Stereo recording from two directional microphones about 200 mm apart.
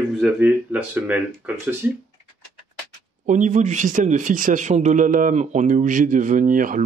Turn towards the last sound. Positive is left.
turn(degrees=-45)  # may be behind; listen again after turning